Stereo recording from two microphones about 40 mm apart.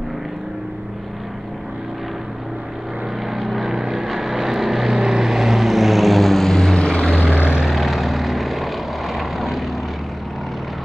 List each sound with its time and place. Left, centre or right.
3.3 s vehicle: centre
7.2 s vehicle: right
7.6 s vehicle: centre